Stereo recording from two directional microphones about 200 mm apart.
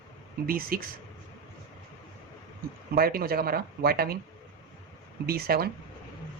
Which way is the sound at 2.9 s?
50° right (ahead or behind).